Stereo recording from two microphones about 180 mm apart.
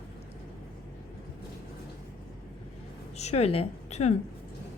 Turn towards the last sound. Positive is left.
turn(degrees=40)  # may be behind; listen again after turning